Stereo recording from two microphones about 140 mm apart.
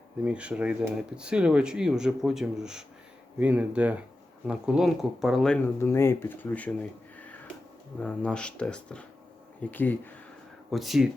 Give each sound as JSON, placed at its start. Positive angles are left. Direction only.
{"t": 0.3, "sound": "speech", "side_deg": -10}
{"t": 5.6, "sound": "speech", "side_deg": 20}
{"t": 8.0, "sound": "speech", "side_deg": 10}
{"t": 10.7, "sound": "speech", "side_deg": 0}